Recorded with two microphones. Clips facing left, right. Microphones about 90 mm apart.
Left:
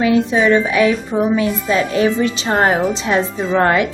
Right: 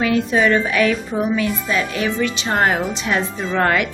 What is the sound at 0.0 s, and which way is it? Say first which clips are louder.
A woman's voice: left 3 dB; 20° left (ahead or behind).